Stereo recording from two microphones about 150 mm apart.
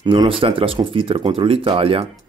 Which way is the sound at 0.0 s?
30° right (ahead or behind).